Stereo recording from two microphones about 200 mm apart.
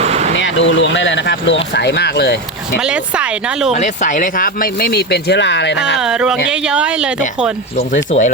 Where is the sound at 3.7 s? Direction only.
35° left (ahead or behind); by 5.8 s 60° left (ahead or behind).